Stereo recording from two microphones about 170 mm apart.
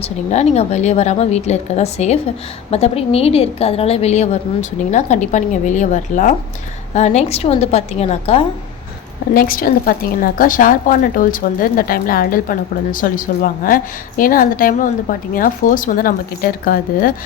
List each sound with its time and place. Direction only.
0.0 s a woman's voice: 40° left (ahead or behind)
9.3 s a woman's voice: 60° left (ahead or behind)